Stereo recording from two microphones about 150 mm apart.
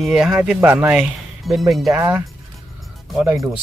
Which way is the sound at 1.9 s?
20° right (ahead or behind).